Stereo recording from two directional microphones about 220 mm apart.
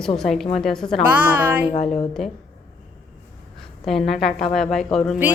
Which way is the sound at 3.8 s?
Centre (ahead or behind).